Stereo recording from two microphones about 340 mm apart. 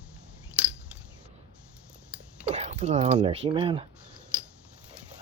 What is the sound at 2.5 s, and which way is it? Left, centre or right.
Speech, centre.